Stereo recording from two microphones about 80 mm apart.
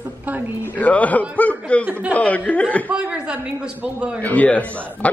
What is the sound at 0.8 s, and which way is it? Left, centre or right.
A woman's voice, centre.